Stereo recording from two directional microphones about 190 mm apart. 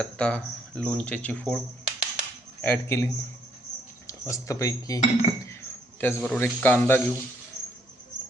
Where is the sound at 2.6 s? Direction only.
10° left (ahead or behind).